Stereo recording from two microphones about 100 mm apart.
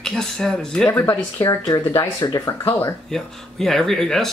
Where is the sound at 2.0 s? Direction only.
35° left (ahead or behind).